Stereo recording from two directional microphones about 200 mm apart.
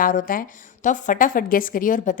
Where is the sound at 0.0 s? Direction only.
45° left (ahead or behind).